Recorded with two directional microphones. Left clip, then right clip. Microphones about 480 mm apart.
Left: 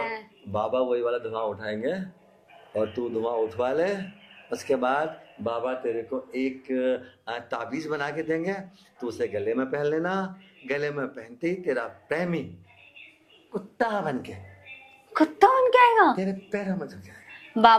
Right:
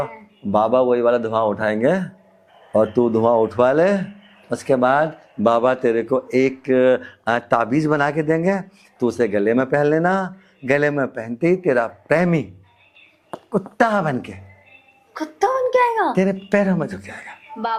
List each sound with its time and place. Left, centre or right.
0.5 s speech: right
5.4 s speech: right
13.5 s speech: right
15.1 s speech: centre
16.1 s speech: right